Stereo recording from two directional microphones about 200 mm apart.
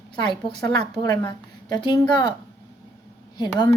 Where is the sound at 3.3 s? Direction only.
20° left (ahead or behind).